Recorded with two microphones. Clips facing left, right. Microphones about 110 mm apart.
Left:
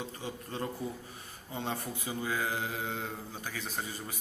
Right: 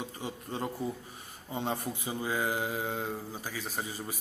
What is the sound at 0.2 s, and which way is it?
A man's voice, 15° right (ahead or behind).